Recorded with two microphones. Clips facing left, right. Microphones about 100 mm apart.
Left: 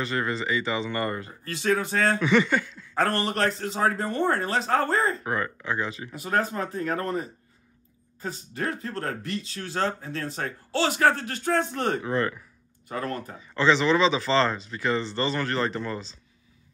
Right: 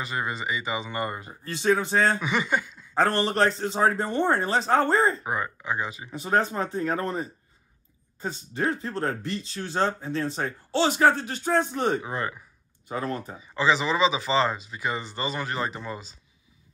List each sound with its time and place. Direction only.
0.0 s speech: 15° right (ahead or behind)
1.5 s speech: 25° right (ahead or behind)
2.1 s speech: 10° right (ahead or behind)
3.2 s speech: 30° right (ahead or behind)
5.2 s speech: 15° right (ahead or behind)
6.1 s speech: 30° right (ahead or behind); by 16.2 s 10° right (ahead or behind)